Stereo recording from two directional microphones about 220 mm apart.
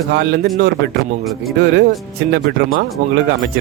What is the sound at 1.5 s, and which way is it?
Speech, 50° right (ahead or behind).